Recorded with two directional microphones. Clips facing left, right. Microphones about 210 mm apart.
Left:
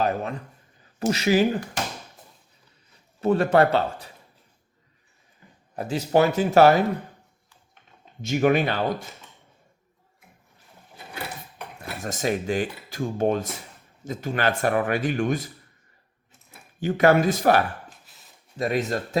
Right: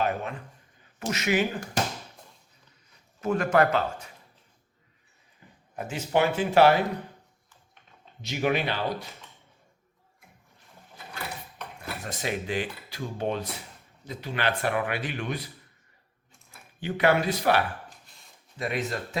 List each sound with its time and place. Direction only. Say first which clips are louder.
0.0 s speech: left 3 dB; 40° left (ahead or behind)
3.2 s speech: left 4 dB; 30° left (ahead or behind)
5.7 s speech: left 5 dB; 35° left (ahead or behind)
8.2 s speech: left 6 dB; 50° left (ahead or behind)
11.9 s speech: left 6 dB; 45° left (ahead or behind)
16.8 s speech: left 5 dB; 45° left (ahead or behind)
18.0 s a sound: left 1 dB; 5° left (ahead or behind)
18.5 s speech: left 6 dB; 40° left (ahead or behind)